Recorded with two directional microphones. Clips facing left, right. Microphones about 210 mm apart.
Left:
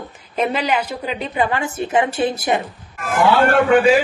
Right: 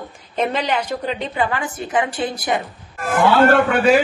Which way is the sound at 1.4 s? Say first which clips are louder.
Left 5 dB; 25° left (ahead or behind).